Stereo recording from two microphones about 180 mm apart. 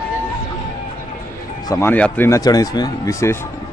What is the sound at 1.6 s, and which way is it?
Speech, 15° left (ahead or behind).